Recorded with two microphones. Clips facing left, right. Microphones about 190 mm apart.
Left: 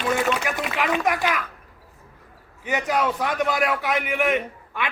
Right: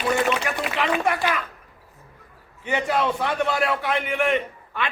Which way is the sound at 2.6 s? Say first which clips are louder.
Even; 10° left (ahead or behind).